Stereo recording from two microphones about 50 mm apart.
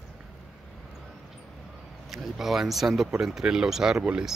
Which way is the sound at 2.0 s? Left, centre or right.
Centre.